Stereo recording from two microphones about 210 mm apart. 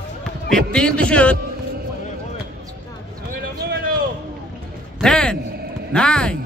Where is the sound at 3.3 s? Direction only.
45° right (ahead or behind).